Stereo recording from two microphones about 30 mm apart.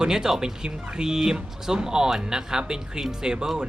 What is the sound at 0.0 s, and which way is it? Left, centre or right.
Speech, right.